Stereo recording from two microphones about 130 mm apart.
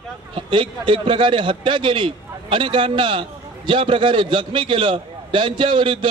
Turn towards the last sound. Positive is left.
turn(degrees=-40)  # may be behind; listen again after turning